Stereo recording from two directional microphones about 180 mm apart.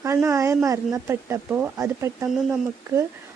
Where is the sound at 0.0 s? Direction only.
15° right (ahead or behind).